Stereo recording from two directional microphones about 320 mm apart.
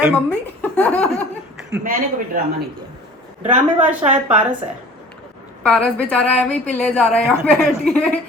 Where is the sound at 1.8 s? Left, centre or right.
Right.